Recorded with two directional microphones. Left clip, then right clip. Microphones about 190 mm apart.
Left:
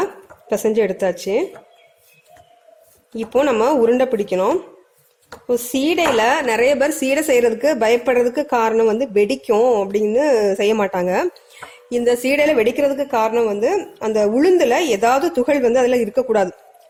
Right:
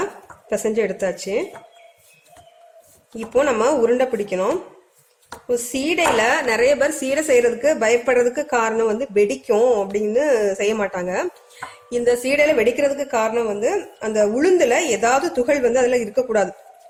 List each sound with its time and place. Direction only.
0.5 s a woman's voice: 35° left (ahead or behind)
3.3 s a woman's voice: 35° left (ahead or behind)